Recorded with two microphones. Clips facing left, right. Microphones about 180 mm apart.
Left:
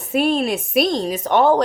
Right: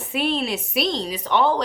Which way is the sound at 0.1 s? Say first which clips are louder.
Left 6 dB; 45° left (ahead or behind).